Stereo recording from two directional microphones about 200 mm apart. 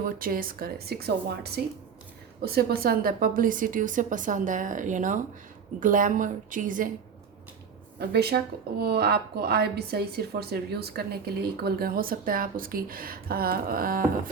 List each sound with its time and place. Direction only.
0.0 s a woman's voice: 45° right (ahead or behind)
7.9 s speech: 55° right (ahead or behind)